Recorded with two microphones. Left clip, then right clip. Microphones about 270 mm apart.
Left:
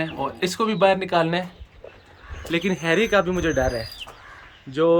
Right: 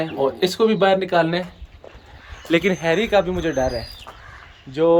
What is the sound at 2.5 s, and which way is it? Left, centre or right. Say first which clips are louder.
Speech: right 6 dB; centre.